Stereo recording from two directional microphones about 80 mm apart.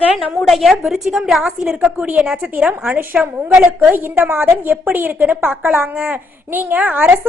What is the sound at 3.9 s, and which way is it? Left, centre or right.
A woman's voice, right.